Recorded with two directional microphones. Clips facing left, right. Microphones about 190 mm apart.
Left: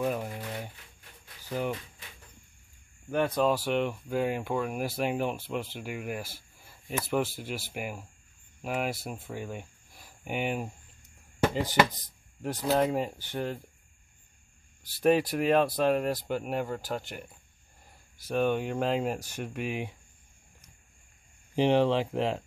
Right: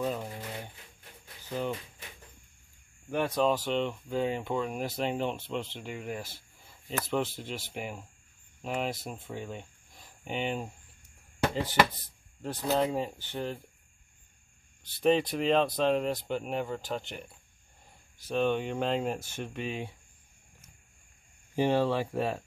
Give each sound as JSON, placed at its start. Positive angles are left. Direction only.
{"t": 0.0, "sound": "speech", "side_deg": 10}
{"t": 1.5, "sound": "speech", "side_deg": 15}
{"t": 3.1, "sound": "speech", "side_deg": 0}
{"t": 12.4, "sound": "speech", "side_deg": 10}
{"t": 15.0, "sound": "speech", "side_deg": 10}
{"t": 21.5, "sound": "speech", "side_deg": 20}